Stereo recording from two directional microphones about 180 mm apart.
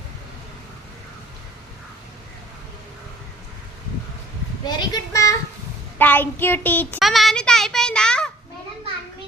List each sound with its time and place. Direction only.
4.6 s speech: 25° left (ahead or behind)
6.0 s child singing: 10° left (ahead or behind)
7.0 s a child's voice: centre (ahead or behind)